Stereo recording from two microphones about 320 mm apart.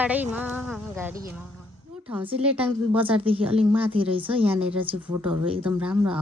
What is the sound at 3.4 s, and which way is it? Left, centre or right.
Speech, centre.